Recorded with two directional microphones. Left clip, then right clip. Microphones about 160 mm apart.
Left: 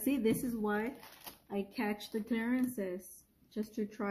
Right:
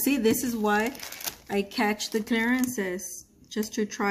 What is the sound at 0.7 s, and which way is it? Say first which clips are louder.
Speech: right 11 dB; 35° right (ahead or behind).